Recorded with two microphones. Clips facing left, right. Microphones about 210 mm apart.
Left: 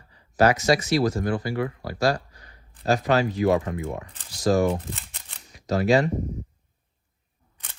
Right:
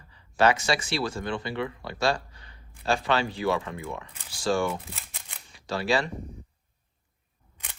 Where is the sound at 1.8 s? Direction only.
25° right (ahead or behind).